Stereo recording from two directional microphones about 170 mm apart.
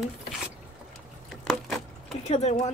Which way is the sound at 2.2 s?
40° left (ahead or behind).